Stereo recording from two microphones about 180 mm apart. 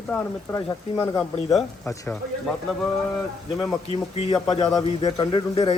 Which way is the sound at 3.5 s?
30° left (ahead or behind).